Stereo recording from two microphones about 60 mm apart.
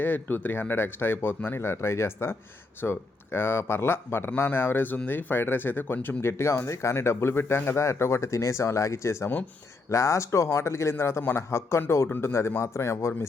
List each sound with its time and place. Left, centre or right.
0.0 s speech: left
6.3 s speech: left